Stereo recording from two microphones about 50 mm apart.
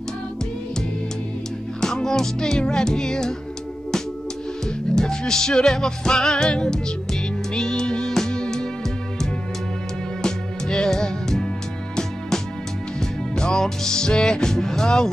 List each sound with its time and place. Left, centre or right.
1.8 s music: centre
4.9 s music: centre
10.2 s music: centre
13.4 s music: centre